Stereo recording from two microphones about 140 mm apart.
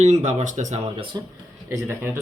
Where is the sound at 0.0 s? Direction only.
55° right (ahead or behind).